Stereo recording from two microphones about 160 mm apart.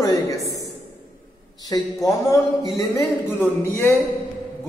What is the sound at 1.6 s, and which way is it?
A man's voice, 20° left (ahead or behind).